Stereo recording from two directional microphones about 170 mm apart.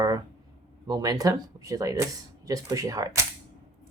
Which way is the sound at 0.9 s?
20° right (ahead or behind).